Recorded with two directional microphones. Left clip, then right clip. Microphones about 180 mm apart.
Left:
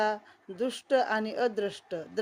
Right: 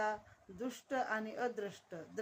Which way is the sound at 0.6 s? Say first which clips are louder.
Left 12 dB; 45° left (ahead or behind).